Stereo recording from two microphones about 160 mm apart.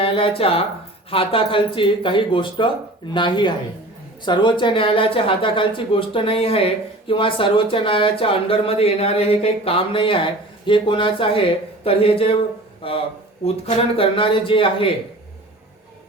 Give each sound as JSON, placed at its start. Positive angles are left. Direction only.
{"t": 0.0, "sound": "speech", "side_deg": 35}